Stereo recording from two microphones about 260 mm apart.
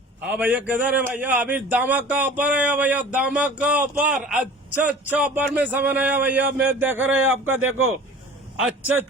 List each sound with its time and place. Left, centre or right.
0.3 s speech: centre